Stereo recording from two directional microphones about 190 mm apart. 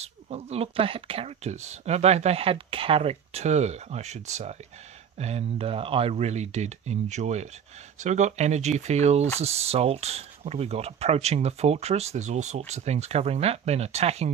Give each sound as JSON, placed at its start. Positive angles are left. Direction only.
{"t": 0.0, "sound": "speech", "side_deg": -35}